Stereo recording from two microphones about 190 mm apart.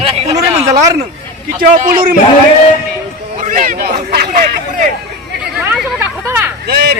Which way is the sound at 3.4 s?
40° right (ahead or behind).